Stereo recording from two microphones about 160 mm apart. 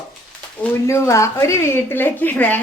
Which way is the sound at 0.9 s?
20° left (ahead or behind).